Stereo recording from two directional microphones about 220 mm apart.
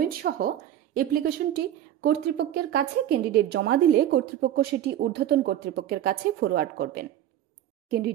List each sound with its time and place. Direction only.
0.0 s a woman's voice: 40° right (ahead or behind)